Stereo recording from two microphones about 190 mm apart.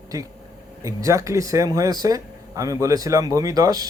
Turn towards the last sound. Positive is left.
turn(degrees=-20)  # may be behind; listen again after turning